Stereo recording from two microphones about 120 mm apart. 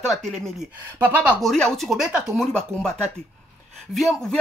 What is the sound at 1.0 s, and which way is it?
Speech, 15° right (ahead or behind).